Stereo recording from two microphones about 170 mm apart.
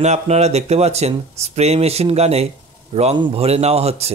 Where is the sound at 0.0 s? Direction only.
40° right (ahead or behind).